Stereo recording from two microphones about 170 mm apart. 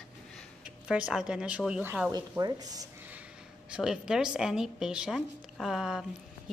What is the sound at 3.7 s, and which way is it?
A woman's voice, 5° right (ahead or behind).